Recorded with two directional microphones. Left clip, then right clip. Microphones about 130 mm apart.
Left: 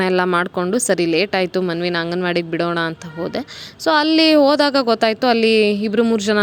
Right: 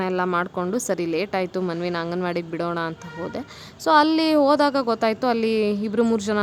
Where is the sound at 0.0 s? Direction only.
35° left (ahead or behind).